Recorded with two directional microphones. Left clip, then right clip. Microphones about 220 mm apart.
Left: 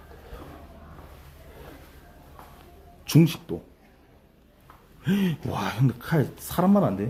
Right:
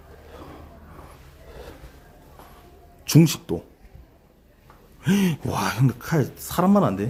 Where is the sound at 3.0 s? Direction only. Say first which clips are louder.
Right 3 dB; 15° right (ahead or behind).